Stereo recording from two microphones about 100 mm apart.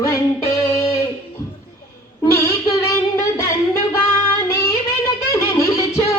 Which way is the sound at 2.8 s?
30° left (ahead or behind).